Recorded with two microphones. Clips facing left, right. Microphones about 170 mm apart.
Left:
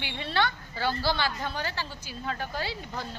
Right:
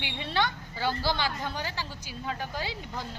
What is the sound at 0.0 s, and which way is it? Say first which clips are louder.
A woman's voice: left 1 dB; 15° right (ahead or behind).